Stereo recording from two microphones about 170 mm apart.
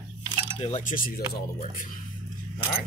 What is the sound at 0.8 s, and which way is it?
Speech, 55° left (ahead or behind).